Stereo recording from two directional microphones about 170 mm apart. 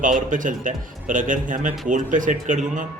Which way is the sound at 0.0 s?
50° right (ahead or behind).